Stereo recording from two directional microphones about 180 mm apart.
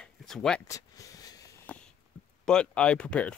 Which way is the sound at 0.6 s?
20° left (ahead or behind).